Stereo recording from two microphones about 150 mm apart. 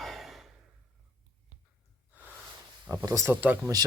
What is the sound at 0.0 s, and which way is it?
Sigh, centre (ahead or behind).